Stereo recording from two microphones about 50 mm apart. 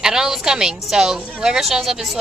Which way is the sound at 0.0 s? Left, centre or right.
Centre.